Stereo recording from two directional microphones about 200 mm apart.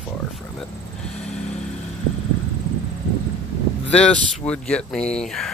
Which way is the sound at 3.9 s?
5° left (ahead or behind).